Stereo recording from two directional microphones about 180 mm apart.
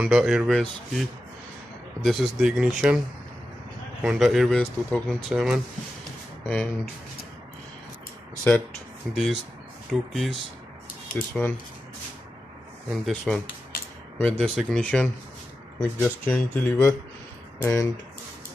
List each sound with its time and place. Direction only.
0.0 s speech: 5° right (ahead or behind)
2.0 s speech: centre (ahead or behind)
4.0 s speech: 5° right (ahead or behind)
6.5 s speech: 10° left (ahead or behind)
8.5 s speech: 10° left (ahead or behind)
11.4 s speech: 10° left (ahead or behind)
12.9 s speech: centre (ahead or behind); by 17.8 s 15° left (ahead or behind)